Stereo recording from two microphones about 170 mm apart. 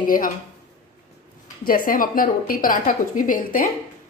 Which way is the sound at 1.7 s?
55° left (ahead or behind).